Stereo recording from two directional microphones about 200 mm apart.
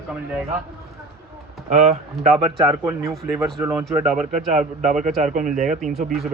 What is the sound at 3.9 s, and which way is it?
Speech, 5° right (ahead or behind).